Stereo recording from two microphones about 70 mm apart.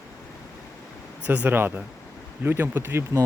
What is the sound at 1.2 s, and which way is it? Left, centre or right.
Speech, right.